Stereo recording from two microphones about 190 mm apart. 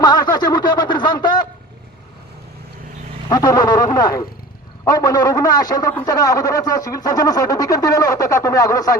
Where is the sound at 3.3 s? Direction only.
20° left (ahead or behind).